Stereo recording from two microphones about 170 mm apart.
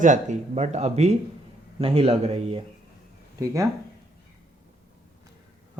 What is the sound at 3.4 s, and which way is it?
Speech, 20° right (ahead or behind).